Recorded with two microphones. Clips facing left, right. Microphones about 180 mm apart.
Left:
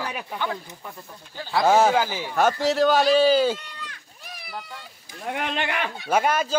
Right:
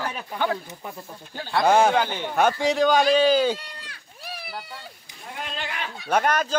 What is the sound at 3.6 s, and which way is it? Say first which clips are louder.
Run: left 2 dB; 35° right (ahead or behind).